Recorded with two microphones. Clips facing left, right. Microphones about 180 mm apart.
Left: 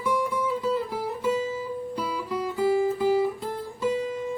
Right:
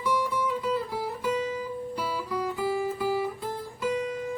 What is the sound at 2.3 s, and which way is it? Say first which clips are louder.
Music: left 6 dB; 20° left (ahead or behind).